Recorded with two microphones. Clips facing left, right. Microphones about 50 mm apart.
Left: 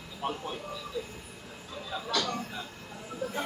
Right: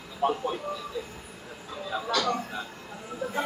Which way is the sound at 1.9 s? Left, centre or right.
Right.